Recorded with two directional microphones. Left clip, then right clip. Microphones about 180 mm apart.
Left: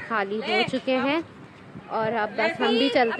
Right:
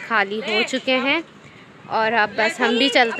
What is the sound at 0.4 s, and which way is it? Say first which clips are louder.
Speech: right 3 dB; 65° left (ahead or behind).